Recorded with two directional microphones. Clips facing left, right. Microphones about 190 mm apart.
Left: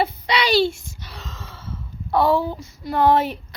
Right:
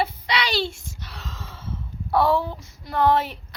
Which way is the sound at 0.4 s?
10° left (ahead or behind).